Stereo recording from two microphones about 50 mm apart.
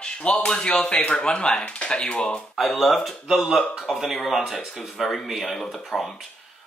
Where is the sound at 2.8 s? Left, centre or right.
Centre.